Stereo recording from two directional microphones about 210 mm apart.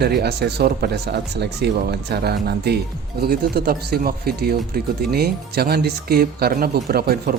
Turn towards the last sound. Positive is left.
turn(degrees=-45)  # may be behind; listen again after turning